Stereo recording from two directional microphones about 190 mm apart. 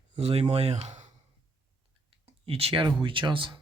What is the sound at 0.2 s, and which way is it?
Speech, 30° right (ahead or behind).